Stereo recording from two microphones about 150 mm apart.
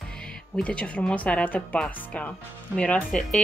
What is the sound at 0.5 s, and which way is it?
Speech, 10° left (ahead or behind).